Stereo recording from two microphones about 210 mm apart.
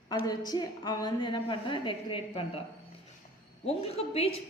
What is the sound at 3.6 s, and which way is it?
Speech, 30° left (ahead or behind).